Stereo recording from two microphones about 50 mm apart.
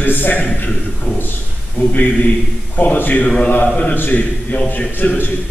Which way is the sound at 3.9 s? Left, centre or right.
Left.